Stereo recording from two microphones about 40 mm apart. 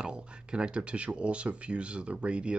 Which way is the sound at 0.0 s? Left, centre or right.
Right.